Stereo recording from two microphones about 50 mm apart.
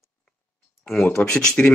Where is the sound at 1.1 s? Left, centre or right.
Centre.